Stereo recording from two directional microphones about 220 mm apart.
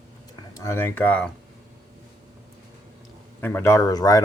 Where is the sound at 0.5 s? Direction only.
15° left (ahead or behind).